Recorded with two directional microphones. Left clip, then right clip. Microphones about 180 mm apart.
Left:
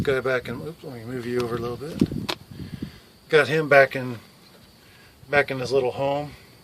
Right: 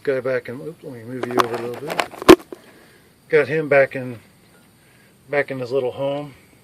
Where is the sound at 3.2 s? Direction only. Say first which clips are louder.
Right 1 dB; 35° left (ahead or behind).